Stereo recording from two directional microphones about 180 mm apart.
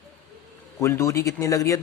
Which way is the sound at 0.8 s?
15° left (ahead or behind).